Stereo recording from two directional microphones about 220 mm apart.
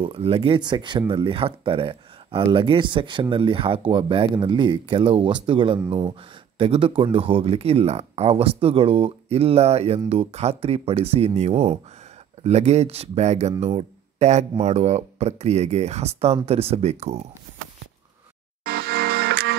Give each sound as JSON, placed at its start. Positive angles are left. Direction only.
{"t": 0.0, "sound": "speech", "side_deg": -25}
{"t": 18.6, "sound": "music", "side_deg": -45}